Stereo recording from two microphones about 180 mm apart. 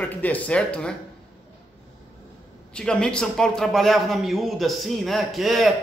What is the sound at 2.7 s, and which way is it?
A man's voice, 5° left (ahead or behind).